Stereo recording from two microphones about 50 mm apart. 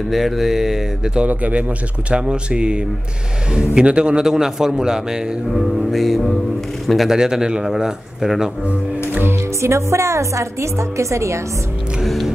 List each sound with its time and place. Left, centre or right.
0.1 s a man's voice: centre
1.2 s a man's voice: right; by 5.6 s centre
5.6 s music: centre
7.2 s a man's voice: centre
9.6 s a woman's voice: right
12.0 s music: centre